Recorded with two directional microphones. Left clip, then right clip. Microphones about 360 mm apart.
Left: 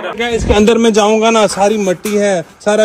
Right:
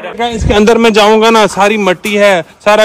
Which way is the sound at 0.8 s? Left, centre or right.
Right.